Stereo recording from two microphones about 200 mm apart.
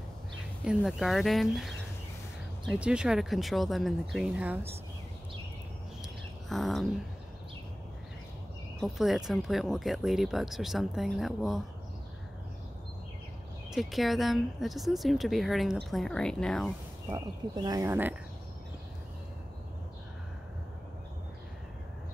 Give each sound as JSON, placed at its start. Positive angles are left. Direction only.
{"t": 0.7, "sound": "speech", "side_deg": 0}
{"t": 6.5, "sound": "speech", "side_deg": 0}
{"t": 8.8, "sound": "speech", "side_deg": 0}
{"t": 13.7, "sound": "speech", "side_deg": 0}
{"t": 17.1, "sound": "speech", "side_deg": -20}